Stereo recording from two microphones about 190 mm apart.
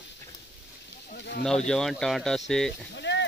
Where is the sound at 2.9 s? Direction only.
70° left (ahead or behind).